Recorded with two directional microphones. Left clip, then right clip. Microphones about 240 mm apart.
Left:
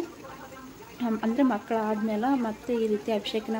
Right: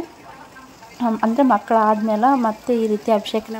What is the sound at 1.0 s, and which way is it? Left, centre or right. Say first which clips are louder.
Speech: right 9 dB; centre.